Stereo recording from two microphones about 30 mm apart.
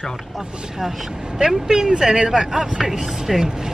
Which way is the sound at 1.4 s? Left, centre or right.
Centre.